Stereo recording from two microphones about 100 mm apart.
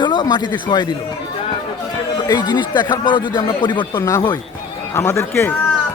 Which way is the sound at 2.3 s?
45° left (ahead or behind).